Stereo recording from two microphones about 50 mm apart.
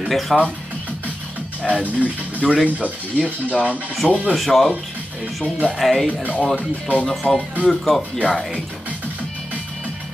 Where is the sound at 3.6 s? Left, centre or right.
Right.